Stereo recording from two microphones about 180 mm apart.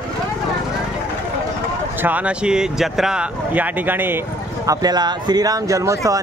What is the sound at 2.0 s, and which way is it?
Speech, 10° right (ahead or behind).